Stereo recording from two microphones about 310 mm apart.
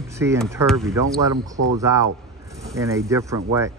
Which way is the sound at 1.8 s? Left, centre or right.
Centre.